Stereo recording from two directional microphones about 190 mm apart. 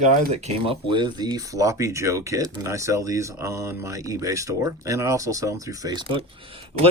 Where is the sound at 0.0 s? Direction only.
35° right (ahead or behind).